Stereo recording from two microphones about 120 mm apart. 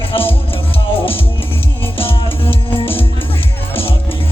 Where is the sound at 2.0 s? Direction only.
50° left (ahead or behind).